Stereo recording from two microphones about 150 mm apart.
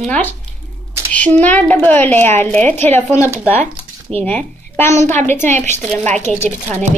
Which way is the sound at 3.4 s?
15° left (ahead or behind).